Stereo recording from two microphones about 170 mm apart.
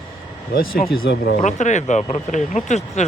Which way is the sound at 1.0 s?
85° left.